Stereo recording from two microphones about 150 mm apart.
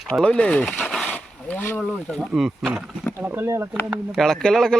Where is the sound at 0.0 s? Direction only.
5° left (ahead or behind).